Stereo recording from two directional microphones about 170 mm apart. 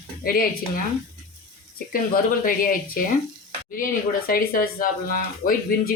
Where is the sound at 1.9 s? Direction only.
55° left (ahead or behind).